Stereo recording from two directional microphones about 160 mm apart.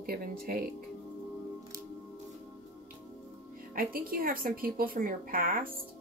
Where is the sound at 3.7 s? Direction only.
65° right (ahead or behind).